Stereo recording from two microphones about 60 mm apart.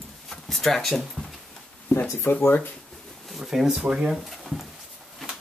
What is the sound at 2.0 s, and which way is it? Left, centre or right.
Speech, left.